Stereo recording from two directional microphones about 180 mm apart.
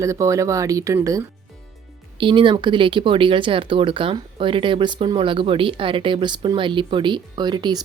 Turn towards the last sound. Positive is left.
turn(degrees=-25)  # may be behind; listen again after turning